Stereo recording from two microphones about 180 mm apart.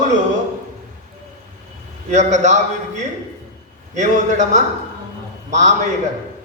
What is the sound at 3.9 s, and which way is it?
A man's voice, 40° right (ahead or behind).